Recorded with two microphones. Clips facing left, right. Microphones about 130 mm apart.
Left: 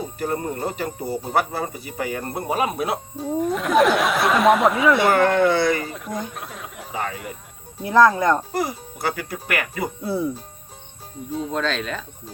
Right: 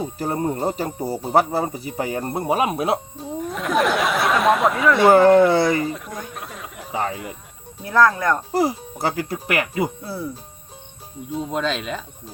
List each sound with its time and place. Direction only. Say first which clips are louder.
0.2 s speech: right 2 dB; 25° right (ahead or behind)
3.4 s speech: left 3 dB; centre (ahead or behind)
5.1 s speech: right 5 dB; 30° right (ahead or behind)
5.8 s speech: right 2 dB; centre (ahead or behind)
6.9 s speech: right 3 dB; 25° right (ahead or behind)
7.8 s speech: left 2 dB; 20° left (ahead or behind)
8.5 s speech: right 5 dB; 30° right (ahead or behind)
10.0 s speech: left 5 dB; 20° left (ahead or behind)
11.3 s speech: right 1 dB; 5° right (ahead or behind)